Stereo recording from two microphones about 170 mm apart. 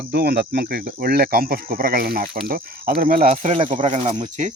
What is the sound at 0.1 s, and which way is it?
A man's voice, 70° right (ahead or behind).